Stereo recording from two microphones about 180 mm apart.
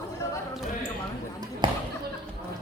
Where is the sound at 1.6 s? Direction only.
25° right (ahead or behind).